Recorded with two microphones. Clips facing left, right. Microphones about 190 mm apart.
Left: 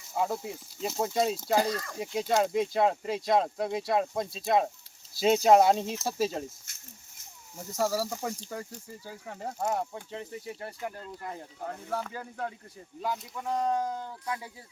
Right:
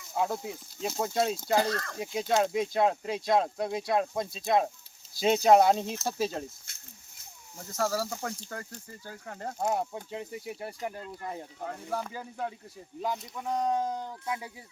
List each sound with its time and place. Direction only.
0.1 s speech: centre (ahead or behind)
7.5 s speech: 5° left (ahead or behind)
9.6 s speech: 10° right (ahead or behind)
13.6 s speech: 20° right (ahead or behind)